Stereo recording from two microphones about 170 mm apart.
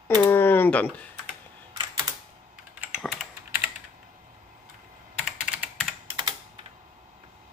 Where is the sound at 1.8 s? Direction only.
25° right (ahead or behind).